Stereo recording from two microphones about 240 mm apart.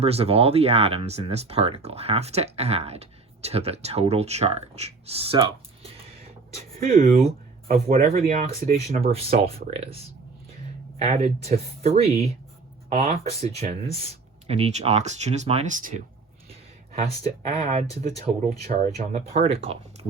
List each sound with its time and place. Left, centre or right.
0.0 s speech: right
6.7 s speech: right
11.0 s speech: right
16.5 s a sound: right
17.2 s speech: right